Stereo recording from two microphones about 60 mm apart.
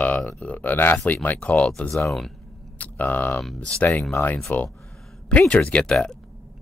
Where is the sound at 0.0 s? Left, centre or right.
Left.